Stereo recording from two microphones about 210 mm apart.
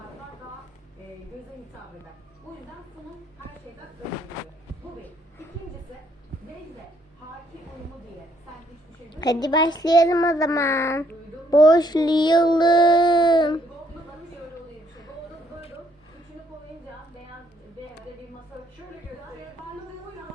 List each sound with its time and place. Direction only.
9.4 s child singing: 20° left (ahead or behind)